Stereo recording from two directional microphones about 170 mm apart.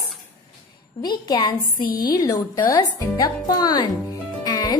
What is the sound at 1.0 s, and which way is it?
Speech, 25° left (ahead or behind).